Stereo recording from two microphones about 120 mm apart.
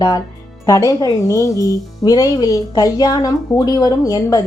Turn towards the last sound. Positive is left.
turn(degrees=30)  # may be behind; listen again after turning